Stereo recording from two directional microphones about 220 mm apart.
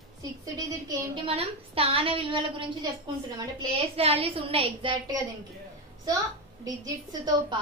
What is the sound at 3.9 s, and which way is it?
A woman's voice, 25° right (ahead or behind).